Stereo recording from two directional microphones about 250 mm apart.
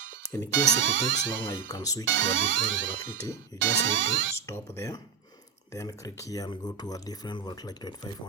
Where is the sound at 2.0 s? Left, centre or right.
Right.